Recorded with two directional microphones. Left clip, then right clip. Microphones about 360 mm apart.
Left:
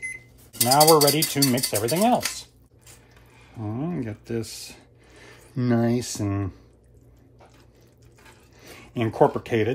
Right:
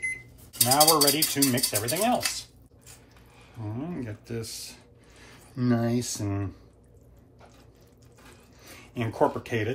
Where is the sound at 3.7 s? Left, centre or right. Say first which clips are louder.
Left 5 dB; left.